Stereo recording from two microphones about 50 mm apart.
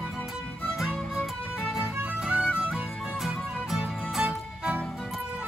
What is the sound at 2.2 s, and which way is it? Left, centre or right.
Music, centre.